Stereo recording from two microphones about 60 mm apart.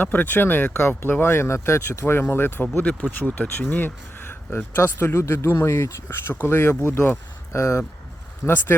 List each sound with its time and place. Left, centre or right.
0.0 s speech: left
4.8 s speech: left
8.4 s speech: left